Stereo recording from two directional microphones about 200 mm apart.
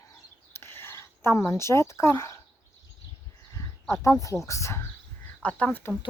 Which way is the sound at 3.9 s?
15° left (ahead or behind).